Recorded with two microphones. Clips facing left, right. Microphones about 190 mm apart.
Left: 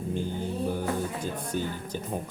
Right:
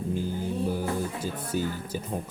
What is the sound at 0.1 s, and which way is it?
Music, 5° right (ahead or behind).